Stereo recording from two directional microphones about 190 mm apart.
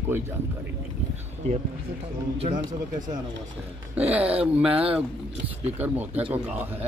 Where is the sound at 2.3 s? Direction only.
30° right (ahead or behind).